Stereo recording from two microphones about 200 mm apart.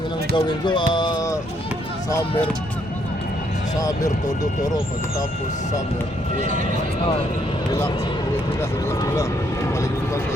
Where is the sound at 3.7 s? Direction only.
15° left (ahead or behind).